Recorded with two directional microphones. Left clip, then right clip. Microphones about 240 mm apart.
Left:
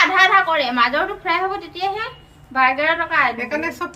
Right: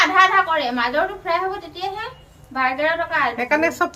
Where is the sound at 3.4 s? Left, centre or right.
Centre.